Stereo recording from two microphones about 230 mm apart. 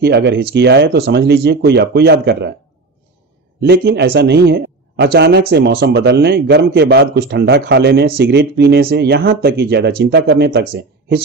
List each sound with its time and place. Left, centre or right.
0.0 s speech: right
3.6 s speech: right